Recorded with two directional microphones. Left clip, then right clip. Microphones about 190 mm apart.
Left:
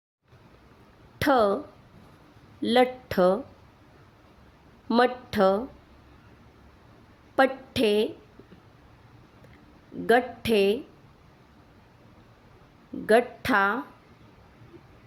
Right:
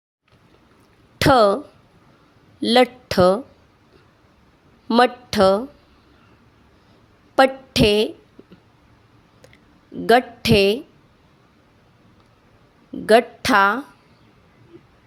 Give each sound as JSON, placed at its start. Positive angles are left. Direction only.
{"t": 1.2, "sound": "speech", "side_deg": -50}
{"t": 4.9, "sound": "speech", "side_deg": -50}
{"t": 7.3, "sound": "a woman's voice", "side_deg": -50}
{"t": 10.1, "sound": "speech", "side_deg": -50}
{"t": 13.1, "sound": "speech", "side_deg": -50}